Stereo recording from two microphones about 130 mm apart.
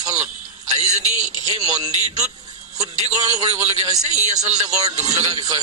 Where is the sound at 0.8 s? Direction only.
60° right (ahead or behind).